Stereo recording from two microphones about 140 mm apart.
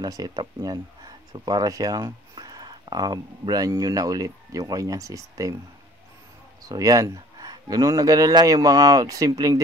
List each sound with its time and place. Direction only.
0.0 s speech: 30° right (ahead or behind)
6.7 s speech: 25° right (ahead or behind)